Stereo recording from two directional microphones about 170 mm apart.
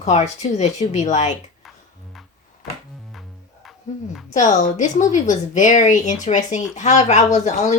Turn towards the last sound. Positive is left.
turn(degrees=45)  # may be behind; listen again after turning